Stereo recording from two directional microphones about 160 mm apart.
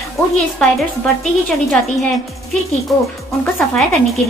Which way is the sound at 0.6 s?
5° left (ahead or behind).